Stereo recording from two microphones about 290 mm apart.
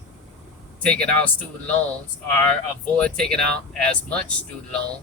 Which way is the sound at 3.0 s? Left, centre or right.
Centre.